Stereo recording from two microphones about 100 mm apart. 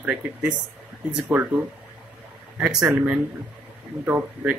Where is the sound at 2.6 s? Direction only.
10° right (ahead or behind).